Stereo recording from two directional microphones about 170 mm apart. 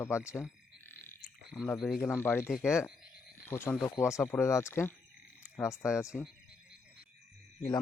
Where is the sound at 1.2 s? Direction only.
5° right (ahead or behind).